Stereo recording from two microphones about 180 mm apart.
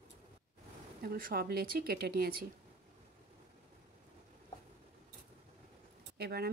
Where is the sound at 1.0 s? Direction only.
55° right (ahead or behind).